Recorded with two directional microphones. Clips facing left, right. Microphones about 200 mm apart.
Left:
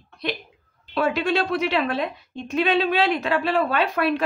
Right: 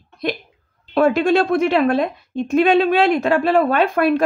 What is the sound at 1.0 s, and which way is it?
A woman's voice, 50° right (ahead or behind).